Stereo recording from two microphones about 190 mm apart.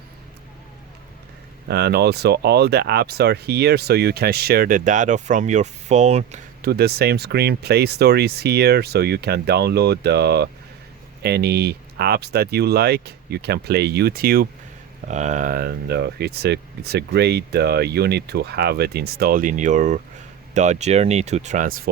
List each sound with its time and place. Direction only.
1.6 s speech: 60° right (ahead or behind); by 6.4 s 35° right (ahead or behind)
6.6 s speech: 55° right (ahead or behind)
15.0 s speech: 40° right (ahead or behind)